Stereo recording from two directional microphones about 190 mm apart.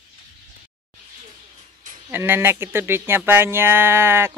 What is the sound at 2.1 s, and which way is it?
Speech, 10° right (ahead or behind).